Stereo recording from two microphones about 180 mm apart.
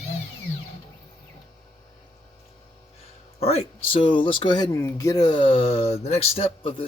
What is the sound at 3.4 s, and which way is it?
Speech, 35° left (ahead or behind).